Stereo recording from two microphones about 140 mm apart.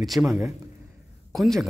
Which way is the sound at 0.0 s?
Centre (ahead or behind).